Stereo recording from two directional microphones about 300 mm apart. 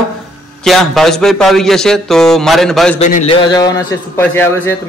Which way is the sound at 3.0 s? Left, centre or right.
Left.